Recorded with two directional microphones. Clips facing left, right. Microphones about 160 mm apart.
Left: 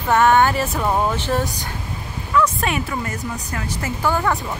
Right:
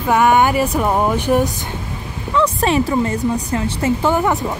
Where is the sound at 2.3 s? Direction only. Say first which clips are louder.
Right 4 dB; 30° right (ahead or behind).